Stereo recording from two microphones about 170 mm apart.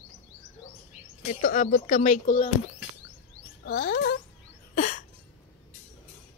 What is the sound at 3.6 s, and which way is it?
Speech, 65° left (ahead or behind).